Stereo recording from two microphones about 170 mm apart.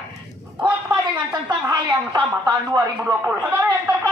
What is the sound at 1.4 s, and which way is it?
Speech, 25° right (ahead or behind).